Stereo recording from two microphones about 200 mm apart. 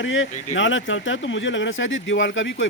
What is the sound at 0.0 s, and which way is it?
Speech, 70° left (ahead or behind).